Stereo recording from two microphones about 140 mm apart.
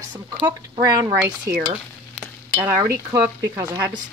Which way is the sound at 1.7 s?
10° right (ahead or behind).